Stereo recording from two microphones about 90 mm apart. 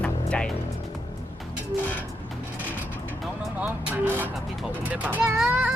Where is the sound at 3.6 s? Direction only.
20° right (ahead or behind).